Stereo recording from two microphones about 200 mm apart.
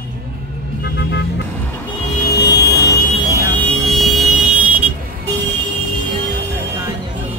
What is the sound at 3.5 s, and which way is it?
Vehicle, 5° left (ahead or behind).